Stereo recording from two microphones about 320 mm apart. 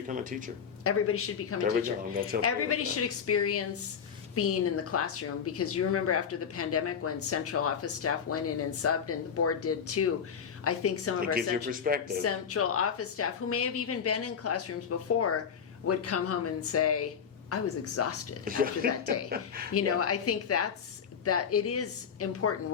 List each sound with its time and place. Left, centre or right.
0.1 s speech: right
0.9 s a woman's voice: left
11.2 s speech: right
12.2 s a woman's voice: left
18.4 s speech: right
19.7 s a woman's voice: left